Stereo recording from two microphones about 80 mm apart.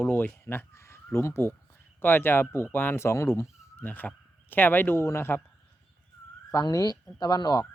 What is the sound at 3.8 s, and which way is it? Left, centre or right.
Speech, left.